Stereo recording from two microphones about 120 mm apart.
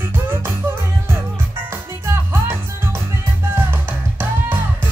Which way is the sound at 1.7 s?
20° right (ahead or behind).